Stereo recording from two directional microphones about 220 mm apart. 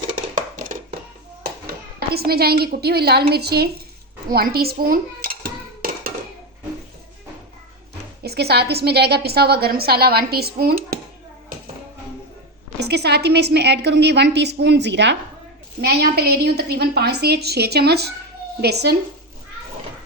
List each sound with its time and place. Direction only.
0.5 s a sound: 35° right (ahead or behind)
2.1 s a woman's voice: 45° right (ahead or behind)
4.3 s dishes: 45° right (ahead or behind)
8.2 s a woman's voice: 45° right (ahead or behind)
12.8 s a woman's voice: 50° right (ahead or behind)